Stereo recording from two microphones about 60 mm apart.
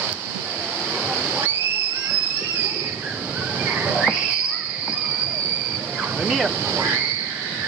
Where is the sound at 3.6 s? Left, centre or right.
Right.